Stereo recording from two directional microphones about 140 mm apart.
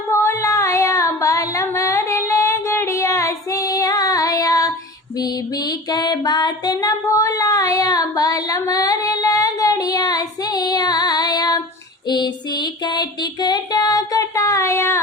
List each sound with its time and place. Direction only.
0.1 s female singing: 20° left (ahead or behind)
5.2 s music: 30° left (ahead or behind)
12.0 s a sound: 30° left (ahead or behind)